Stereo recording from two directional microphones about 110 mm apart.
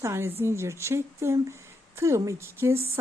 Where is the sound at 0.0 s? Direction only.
25° right (ahead or behind).